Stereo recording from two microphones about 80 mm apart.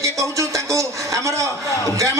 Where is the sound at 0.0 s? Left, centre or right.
Right.